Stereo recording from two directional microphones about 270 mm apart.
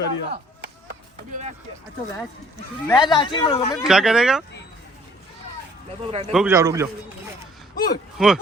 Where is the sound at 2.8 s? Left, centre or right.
Centre.